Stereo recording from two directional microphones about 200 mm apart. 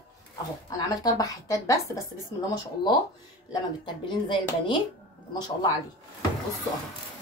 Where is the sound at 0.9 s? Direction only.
20° left (ahead or behind).